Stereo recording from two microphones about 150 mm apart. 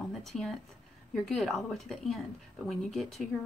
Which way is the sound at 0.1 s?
Centre (ahead or behind).